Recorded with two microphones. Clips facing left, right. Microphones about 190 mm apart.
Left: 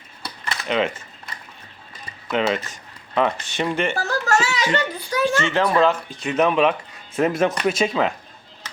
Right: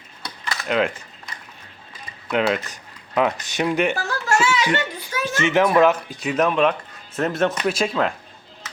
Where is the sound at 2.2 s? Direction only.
Centre (ahead or behind).